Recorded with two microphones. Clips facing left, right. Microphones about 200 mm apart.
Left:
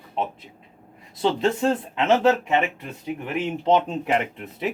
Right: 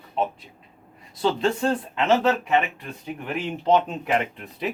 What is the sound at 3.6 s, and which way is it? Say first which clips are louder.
Speech: even; 25° left (ahead or behind).